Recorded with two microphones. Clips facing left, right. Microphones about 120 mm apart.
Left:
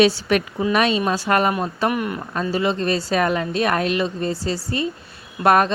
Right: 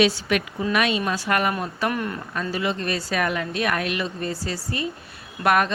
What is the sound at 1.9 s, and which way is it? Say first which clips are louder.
Speech: left 3 dB; 10° left (ahead or behind).